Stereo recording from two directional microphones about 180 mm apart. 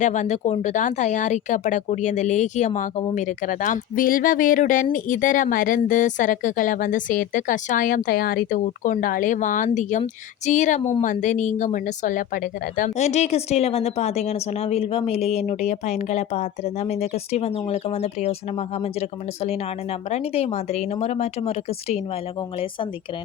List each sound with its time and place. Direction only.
0.0 s speech: 40° left (ahead or behind)